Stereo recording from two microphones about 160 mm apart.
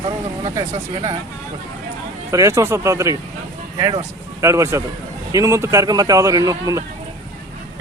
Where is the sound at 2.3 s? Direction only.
20° right (ahead or behind).